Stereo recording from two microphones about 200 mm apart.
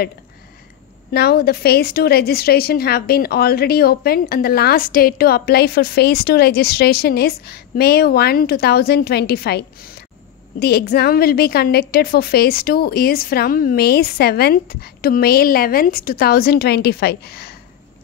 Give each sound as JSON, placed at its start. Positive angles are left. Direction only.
{"t": 1.1, "sound": "a woman's voice", "side_deg": 55}